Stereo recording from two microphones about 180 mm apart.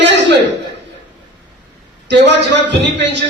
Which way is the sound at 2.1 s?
75° right (ahead or behind).